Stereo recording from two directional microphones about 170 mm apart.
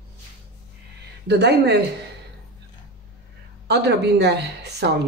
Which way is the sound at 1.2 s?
80° right.